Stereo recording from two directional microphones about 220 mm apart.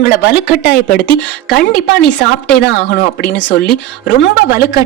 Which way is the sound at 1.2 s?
5° left (ahead or behind).